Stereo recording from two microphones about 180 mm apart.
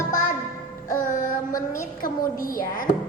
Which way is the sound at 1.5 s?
20° left (ahead or behind).